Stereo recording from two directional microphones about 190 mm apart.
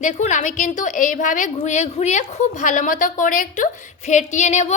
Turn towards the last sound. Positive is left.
turn(degrees=40)  # may be behind; listen again after turning